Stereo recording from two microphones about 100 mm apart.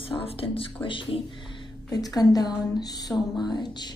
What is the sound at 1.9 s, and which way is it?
A woman's voice, 40° left (ahead or behind).